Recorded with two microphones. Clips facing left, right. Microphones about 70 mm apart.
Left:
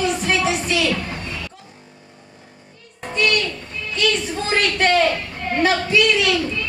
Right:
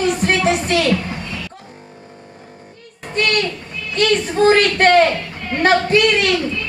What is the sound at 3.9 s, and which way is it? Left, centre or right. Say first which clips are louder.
A woman's voice: right 6 dB; right.